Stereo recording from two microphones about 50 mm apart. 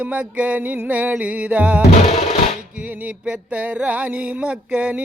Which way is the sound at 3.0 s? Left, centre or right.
Right.